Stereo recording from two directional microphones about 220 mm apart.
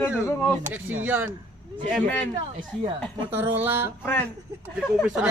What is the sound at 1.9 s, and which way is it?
Speech, 5° left (ahead or behind).